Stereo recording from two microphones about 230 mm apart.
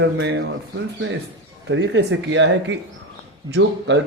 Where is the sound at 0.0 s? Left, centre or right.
Right.